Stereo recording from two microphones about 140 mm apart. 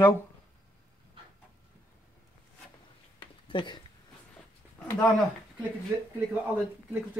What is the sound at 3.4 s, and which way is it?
Speech, 35° left (ahead or behind).